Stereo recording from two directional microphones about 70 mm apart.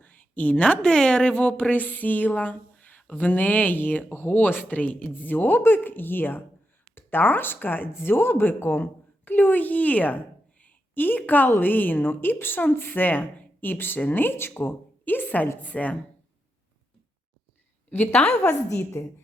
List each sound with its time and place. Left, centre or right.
0.0 s a woman's voice: left
18.1 s a woman's voice: centre
18.4 s a woman's voice: left